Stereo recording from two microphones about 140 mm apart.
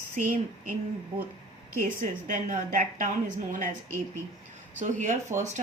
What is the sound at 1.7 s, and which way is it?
A woman's voice, 70° right (ahead or behind).